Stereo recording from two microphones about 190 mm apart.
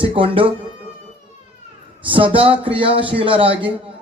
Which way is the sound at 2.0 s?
25° right (ahead or behind).